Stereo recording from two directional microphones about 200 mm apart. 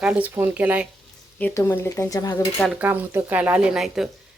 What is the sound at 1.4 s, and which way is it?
Stir, 10° left (ahead or behind).